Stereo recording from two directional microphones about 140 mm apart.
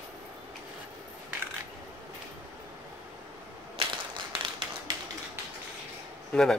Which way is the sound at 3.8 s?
40° right (ahead or behind).